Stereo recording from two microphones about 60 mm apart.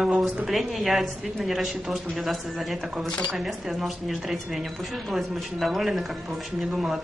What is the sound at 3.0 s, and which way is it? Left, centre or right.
Speech, centre.